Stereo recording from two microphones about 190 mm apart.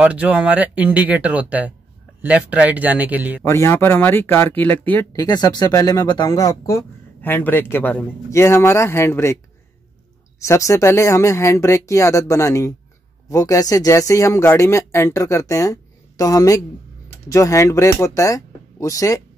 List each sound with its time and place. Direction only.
0.0 s speech: 5° right (ahead or behind)
3.4 s speech: 15° left (ahead or behind)
5.1 s speech: 20° left (ahead or behind)
10.4 s speech: 15° left (ahead or behind)